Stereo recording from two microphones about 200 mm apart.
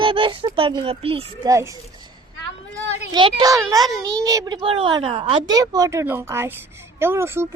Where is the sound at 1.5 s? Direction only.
15° right (ahead or behind).